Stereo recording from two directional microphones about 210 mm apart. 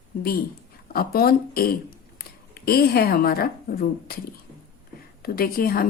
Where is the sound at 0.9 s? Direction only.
45° left (ahead or behind).